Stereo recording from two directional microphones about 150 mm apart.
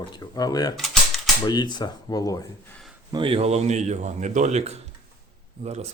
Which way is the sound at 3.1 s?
35° right (ahead or behind).